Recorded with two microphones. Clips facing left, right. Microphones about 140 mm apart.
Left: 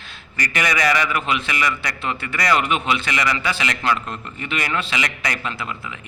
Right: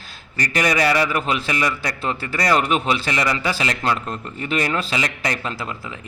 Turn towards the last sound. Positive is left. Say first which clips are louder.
# right 1 dB
turn(degrees=-35)  # may be behind; listen again after turning